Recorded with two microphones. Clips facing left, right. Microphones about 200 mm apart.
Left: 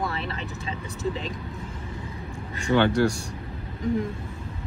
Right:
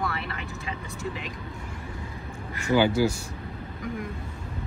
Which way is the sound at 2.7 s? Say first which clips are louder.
Left 1 dB; 5° right (ahead or behind).